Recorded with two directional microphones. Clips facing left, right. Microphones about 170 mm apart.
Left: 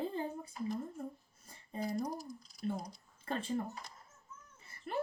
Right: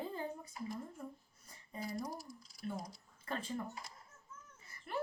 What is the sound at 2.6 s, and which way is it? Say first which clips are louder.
A woman's voice: left 4 dB; 25° left (ahead or behind).